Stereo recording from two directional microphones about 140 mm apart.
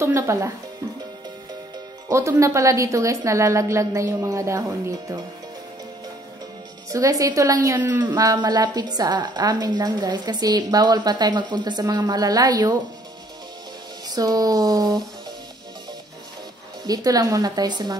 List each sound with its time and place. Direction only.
0.0 s a woman's voice: 20° right (ahead or behind)
2.0 s a woman's voice: 20° right (ahead or behind)
6.9 s a woman's voice: 25° right (ahead or behind)
8.0 s a woman's voice: 25° right (ahead or behind)
14.0 s a woman's voice: 25° right (ahead or behind)
16.8 s a woman's voice: 25° right (ahead or behind)